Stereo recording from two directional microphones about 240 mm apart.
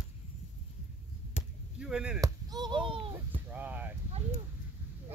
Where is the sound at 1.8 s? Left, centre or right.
Centre.